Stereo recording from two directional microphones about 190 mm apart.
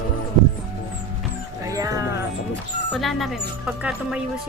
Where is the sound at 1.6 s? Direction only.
15° right (ahead or behind).